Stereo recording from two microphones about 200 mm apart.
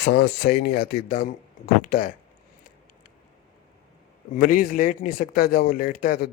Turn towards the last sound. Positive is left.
turn(degrees=45)  # may be behind; listen again after turning